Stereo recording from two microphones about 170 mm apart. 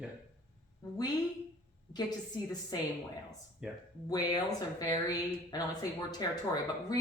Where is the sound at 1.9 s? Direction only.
25° left (ahead or behind).